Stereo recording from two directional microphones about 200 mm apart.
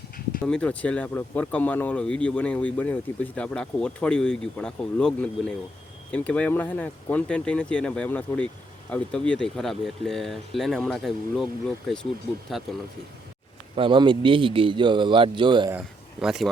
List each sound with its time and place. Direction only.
0.4 s speech: 5° left (ahead or behind)
12.5 s speech: centre (ahead or behind)
13.7 s a man's voice: 25° right (ahead or behind)
16.2 s speech: centre (ahead or behind)